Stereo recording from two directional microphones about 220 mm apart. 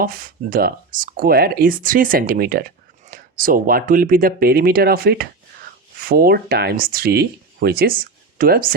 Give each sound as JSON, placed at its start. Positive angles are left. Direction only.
{"t": 0.0, "sound": "speech", "side_deg": -40}